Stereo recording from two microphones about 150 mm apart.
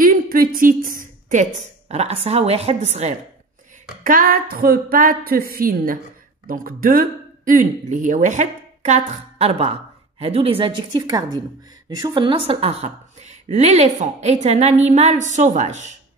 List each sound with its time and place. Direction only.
0.0 s a woman's voice: 70° right (ahead or behind); by 3.2 s 45° right (ahead or behind)
4.0 s a woman's voice: 70° right (ahead or behind); by 15.9 s 50° right (ahead or behind)